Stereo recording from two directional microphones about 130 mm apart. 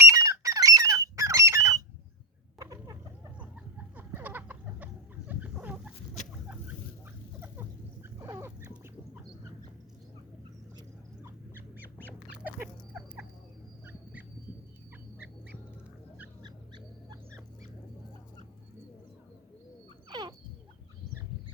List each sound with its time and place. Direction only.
0.1 s squawk: 25° right (ahead or behind)
2.6 s chicken: 25° right (ahead or behind)
3.3 s chicken: 10° right (ahead or behind)
7.3 s a sound: 15° right (ahead or behind)
10.8 s duck: 20° right (ahead or behind)
13.8 s fowl: 15° right (ahead or behind)
16.4 s dog: 35° right (ahead or behind)
20.1 s a sound: 35° right (ahead or behind)